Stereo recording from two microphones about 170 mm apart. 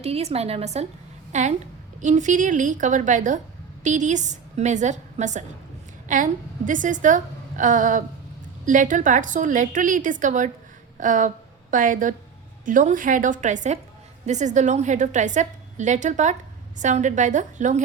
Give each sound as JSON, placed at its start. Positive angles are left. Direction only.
{"t": 0.0, "sound": "a woman's voice", "side_deg": -40}